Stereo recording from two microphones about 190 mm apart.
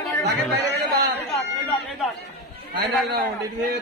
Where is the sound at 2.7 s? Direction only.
55° right (ahead or behind).